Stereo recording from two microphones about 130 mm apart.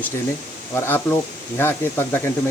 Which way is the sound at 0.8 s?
15° left (ahead or behind).